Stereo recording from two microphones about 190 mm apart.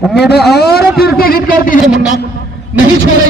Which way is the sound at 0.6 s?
55° left (ahead or behind).